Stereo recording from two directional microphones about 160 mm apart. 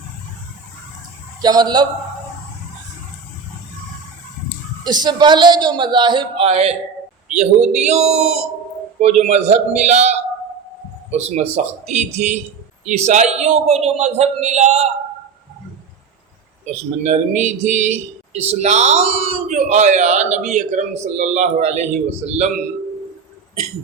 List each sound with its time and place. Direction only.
1.4 s a man's voice: 25° right (ahead or behind)
4.8 s a man's voice: 25° right (ahead or behind); by 14.8 s 45° right (ahead or behind)
17.0 s speech: 45° right (ahead or behind)